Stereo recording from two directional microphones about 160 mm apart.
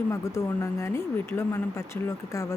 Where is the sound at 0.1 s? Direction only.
20° left (ahead or behind).